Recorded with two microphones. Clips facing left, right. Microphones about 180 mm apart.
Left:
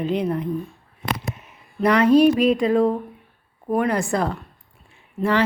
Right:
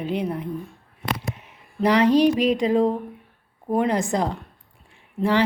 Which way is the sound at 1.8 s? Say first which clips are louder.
Left 2 dB; 15° right (ahead or behind).